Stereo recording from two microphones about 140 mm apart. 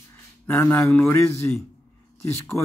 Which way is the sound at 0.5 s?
15° left (ahead or behind).